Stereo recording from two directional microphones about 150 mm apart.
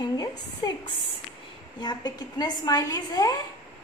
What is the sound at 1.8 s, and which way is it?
A woman's voice, 30° left (ahead or behind).